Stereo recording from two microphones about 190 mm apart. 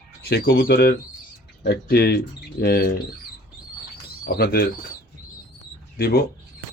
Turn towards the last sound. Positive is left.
turn(degrees=55)  # may be behind; listen again after turning